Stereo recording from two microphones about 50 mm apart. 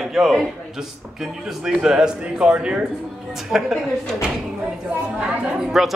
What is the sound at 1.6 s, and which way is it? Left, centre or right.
A man's voice, centre.